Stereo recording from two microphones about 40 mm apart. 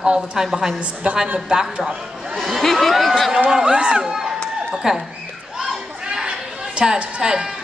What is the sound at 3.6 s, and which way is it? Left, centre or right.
Speech, right.